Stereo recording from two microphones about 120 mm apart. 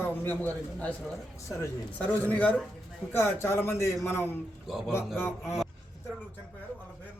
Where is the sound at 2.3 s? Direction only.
10° left (ahead or behind).